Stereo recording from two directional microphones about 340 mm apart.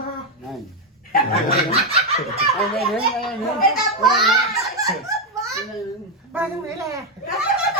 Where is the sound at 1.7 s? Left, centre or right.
Centre.